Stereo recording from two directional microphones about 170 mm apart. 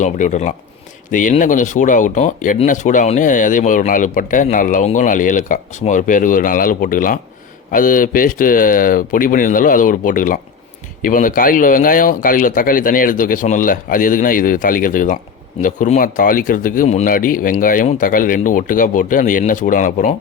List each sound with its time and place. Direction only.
0.0 s speech: 45° left (ahead or behind)